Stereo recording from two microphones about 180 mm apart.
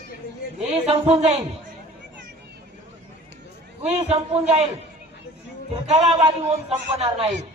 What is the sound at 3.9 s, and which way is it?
Speech, 35° right (ahead or behind).